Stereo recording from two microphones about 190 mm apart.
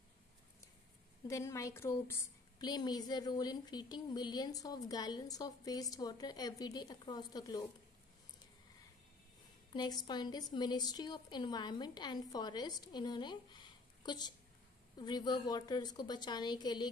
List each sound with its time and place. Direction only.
1.2 s a woman's voice: 15° left (ahead or behind)
9.8 s a woman's voice: 20° left (ahead or behind)